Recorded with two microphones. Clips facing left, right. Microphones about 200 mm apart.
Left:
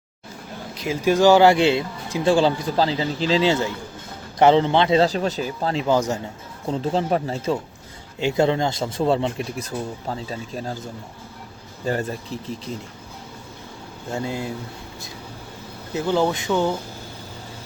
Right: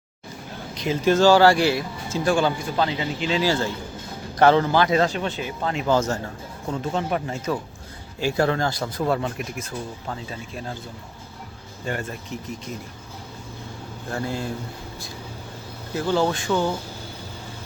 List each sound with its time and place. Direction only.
0.8 s speech: 10° left (ahead or behind); by 5.8 s 35° left (ahead or behind)
5.9 s a man's voice: 15° left (ahead or behind)
6.7 s speech: 30° left (ahead or behind)
11.9 s speech: 35° left (ahead or behind)
14.1 s a man's voice: 20° left (ahead or behind)
16.0 s speech: 20° left (ahead or behind)